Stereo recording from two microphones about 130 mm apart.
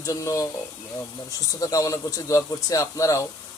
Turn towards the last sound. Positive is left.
turn(degrees=25)  # may be behind; listen again after turning